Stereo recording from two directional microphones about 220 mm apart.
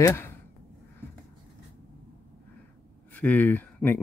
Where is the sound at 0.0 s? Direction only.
10° left (ahead or behind).